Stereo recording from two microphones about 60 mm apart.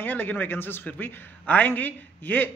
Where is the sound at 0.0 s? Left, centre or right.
Left.